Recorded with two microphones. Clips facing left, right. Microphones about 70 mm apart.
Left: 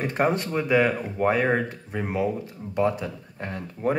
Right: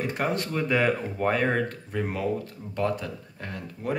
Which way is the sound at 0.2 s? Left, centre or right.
Left.